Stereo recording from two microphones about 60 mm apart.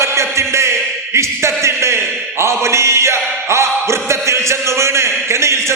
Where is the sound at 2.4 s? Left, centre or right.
Right.